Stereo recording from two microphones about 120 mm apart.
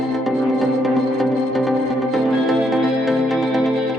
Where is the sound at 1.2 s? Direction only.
Centre (ahead or behind).